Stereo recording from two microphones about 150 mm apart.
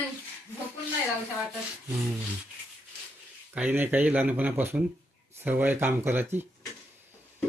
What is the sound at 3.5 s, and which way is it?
Speech, 10° right (ahead or behind).